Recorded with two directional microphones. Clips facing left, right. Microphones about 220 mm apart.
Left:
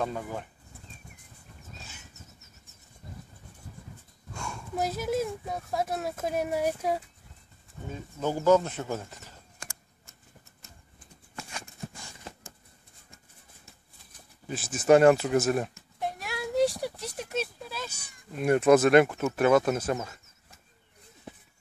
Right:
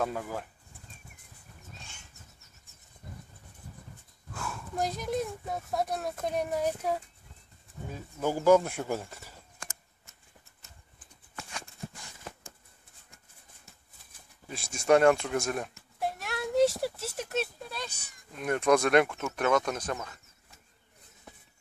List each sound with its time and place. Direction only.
0.0 s speech: 5° right (ahead or behind)
1.8 s a sound: 5° left (ahead or behind)
4.3 s speech: 5° right (ahead or behind)
7.9 s speech: 10° right (ahead or behind)
14.5 s speech: 5° left (ahead or behind)